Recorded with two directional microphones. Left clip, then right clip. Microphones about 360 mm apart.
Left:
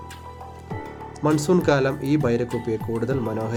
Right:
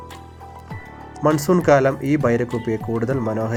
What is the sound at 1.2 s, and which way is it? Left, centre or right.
Speech, centre.